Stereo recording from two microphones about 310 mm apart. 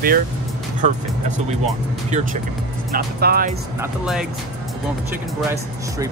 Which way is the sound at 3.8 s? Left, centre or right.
Centre.